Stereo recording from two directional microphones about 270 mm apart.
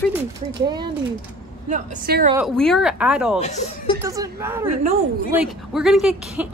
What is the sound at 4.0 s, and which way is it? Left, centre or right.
Speech, centre.